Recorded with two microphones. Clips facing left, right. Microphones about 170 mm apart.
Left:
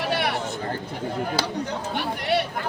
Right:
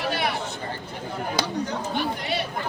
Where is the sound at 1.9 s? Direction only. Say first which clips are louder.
Left 5 dB; 65° left (ahead or behind).